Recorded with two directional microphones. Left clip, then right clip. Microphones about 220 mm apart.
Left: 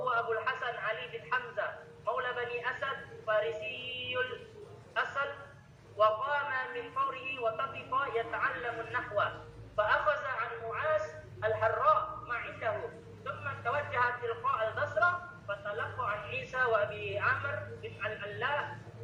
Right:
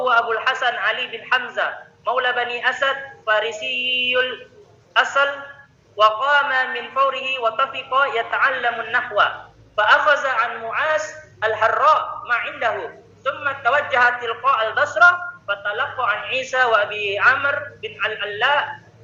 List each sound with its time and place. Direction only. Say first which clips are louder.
0.0 s a man's voice: right 14 dB; 40° right (ahead or behind)